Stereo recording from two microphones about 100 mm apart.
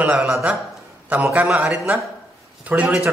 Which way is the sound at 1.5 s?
15° right (ahead or behind).